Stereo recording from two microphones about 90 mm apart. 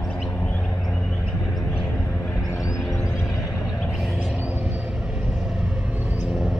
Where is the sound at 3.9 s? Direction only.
Centre (ahead or behind).